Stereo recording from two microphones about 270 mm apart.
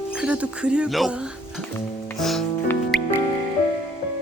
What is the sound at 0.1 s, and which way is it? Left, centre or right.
Speech, centre.